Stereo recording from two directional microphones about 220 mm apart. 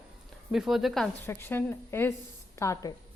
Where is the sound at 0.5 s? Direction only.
Centre (ahead or behind); by 2.9 s 15° left (ahead or behind).